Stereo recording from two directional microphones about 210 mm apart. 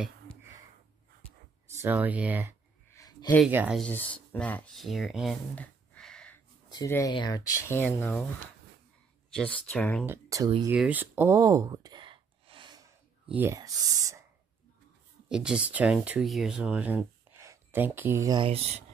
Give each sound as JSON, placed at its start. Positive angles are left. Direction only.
{"t": 1.8, "sound": "speech", "side_deg": -10}
{"t": 2.9, "sound": "a sound", "side_deg": 15}
{"t": 3.3, "sound": "speech", "side_deg": -5}
{"t": 6.7, "sound": "speech", "side_deg": 15}
{"t": 9.3, "sound": "speech", "side_deg": 5}
{"t": 10.0, "sound": "speech", "side_deg": -15}
{"t": 10.8, "sound": "a sound", "side_deg": -10}
{"t": 13.3, "sound": "speech", "side_deg": -10}
{"t": 15.2, "sound": "speech", "side_deg": -5}